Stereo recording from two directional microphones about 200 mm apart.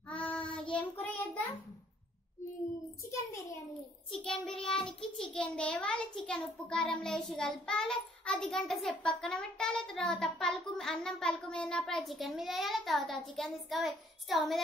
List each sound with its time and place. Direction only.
0.1 s child singing: 5° left (ahead or behind)
3.1 s a sound: 15° left (ahead or behind)
4.1 s child singing: 5° left (ahead or behind)
4.7 s a child's voice: 5° left (ahead or behind)